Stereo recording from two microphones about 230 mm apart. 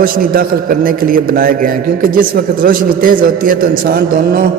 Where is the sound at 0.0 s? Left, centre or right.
Right.